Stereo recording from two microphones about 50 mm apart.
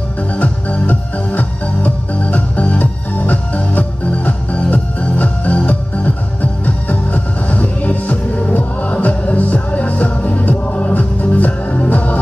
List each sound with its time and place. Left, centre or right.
0.4 s music: left